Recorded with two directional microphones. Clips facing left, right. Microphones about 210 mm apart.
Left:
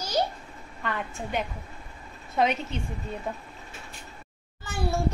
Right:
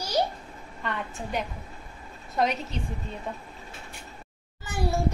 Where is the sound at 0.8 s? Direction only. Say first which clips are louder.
Left 1 dB; centre (ahead or behind).